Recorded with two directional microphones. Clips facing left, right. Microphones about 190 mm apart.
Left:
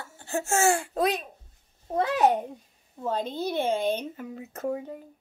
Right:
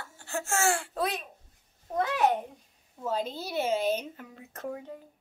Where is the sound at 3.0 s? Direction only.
5° right (ahead or behind).